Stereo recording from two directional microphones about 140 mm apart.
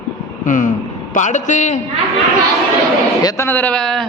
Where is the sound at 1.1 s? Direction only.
60° left (ahead or behind).